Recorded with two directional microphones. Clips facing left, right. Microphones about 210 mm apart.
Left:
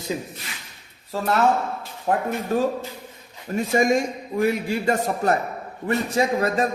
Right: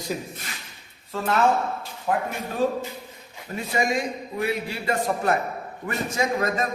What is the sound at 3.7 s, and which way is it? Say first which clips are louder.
A man's voice: left 5 dB; 45° left (ahead or behind).